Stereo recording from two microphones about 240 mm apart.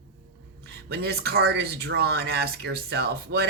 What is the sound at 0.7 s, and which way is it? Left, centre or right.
Speech, right.